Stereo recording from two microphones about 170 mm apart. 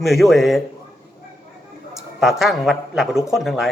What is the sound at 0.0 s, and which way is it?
Speech, centre (ahead or behind).